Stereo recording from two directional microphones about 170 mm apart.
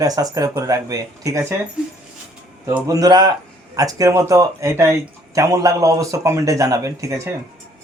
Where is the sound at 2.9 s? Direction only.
20° right (ahead or behind).